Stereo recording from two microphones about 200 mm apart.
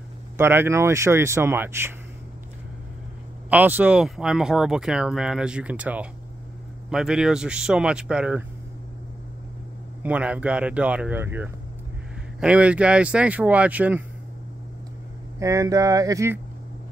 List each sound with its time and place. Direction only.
0.4 s speech: 10° right (ahead or behind)
3.4 s speech: 10° right (ahead or behind)
10.0 s speech: 5° right (ahead or behind)
15.3 s speech: 15° right (ahead or behind)